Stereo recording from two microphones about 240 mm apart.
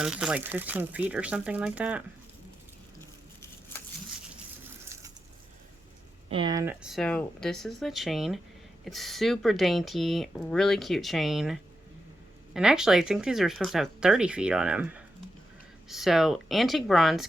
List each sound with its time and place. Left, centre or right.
0.0 s speech: centre
4.9 s bird: centre
6.2 s speech: right
6.8 s speech: centre